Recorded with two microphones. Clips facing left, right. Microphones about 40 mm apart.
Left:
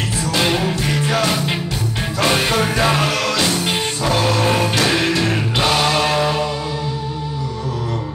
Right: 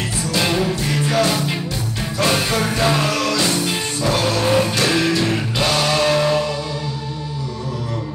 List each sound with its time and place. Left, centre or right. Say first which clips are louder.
0.3 s music: left 1 dB; centre
4.8 s music: even; left